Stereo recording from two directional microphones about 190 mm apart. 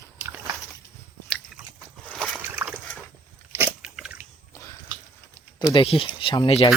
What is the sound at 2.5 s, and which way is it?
Slosh, 10° right (ahead or behind).